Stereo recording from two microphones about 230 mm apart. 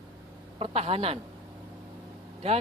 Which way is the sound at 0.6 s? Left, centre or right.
Right.